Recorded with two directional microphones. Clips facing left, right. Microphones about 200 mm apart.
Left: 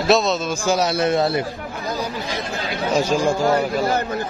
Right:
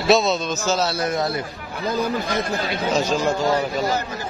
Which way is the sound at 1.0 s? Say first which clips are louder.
Left 4 dB; 25° left (ahead or behind).